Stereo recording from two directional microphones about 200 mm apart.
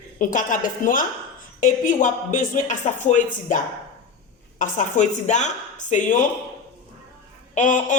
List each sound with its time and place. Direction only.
0.2 s speech: 40° left (ahead or behind)
7.5 s speech: 40° left (ahead or behind)